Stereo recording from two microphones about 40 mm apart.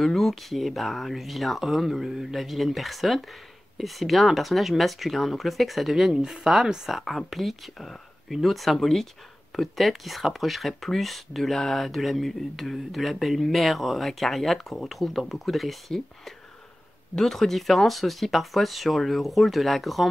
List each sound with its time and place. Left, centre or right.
0.0 s speech: centre
6.1 s speech: centre
6.9 s speech: centre
17.1 s speech: centre